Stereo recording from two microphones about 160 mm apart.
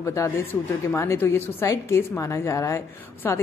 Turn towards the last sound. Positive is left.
turn(degrees=15)  # may be behind; listen again after turning